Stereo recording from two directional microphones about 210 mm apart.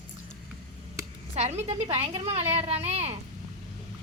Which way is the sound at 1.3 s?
30° right (ahead or behind).